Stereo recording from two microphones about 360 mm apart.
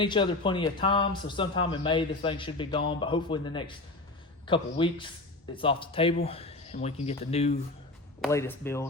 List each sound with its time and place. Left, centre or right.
0.0 s speech: centre
8.2 s speech: centre